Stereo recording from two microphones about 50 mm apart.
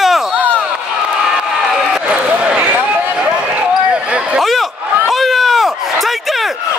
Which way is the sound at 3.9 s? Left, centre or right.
Right.